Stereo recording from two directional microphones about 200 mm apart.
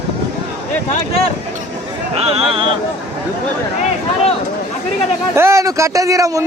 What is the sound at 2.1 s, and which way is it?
Speech, 30° right (ahead or behind).